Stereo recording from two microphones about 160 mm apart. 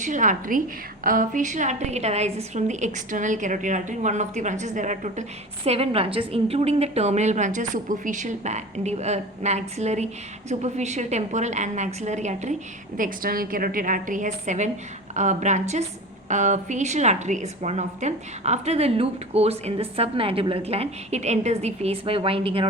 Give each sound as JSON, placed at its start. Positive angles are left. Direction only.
{"t": 0.0, "sound": "a woman's voice", "side_deg": -50}
{"t": 5.6, "sound": "a woman's voice", "side_deg": -40}
{"t": 13.0, "sound": "a woman's voice", "side_deg": -60}